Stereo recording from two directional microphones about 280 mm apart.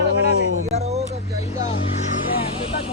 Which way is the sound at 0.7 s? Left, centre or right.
Right.